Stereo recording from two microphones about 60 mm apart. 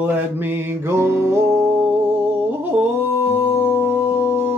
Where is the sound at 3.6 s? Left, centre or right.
Right.